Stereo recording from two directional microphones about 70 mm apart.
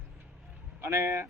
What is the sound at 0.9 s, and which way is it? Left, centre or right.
Speech, right.